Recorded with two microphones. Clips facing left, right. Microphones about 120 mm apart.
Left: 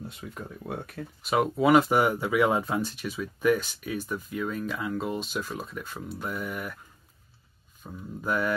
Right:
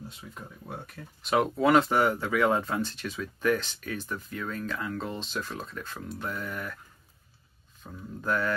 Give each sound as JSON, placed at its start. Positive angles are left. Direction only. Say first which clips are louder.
{"t": 0.2, "sound": "speech", "louder": "left 5 dB", "side_deg": 55}
{"t": 1.2, "sound": "speech", "louder": "left 1 dB", "side_deg": 5}
{"t": 7.8, "sound": "speech", "louder": "left 1 dB", "side_deg": 10}